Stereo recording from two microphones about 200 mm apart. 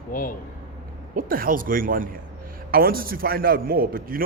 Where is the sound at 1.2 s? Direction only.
45° right (ahead or behind).